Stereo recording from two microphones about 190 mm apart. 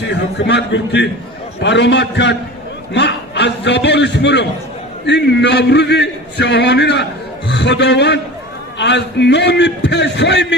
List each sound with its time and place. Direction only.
0.0 s a man's voice: 65° left (ahead or behind)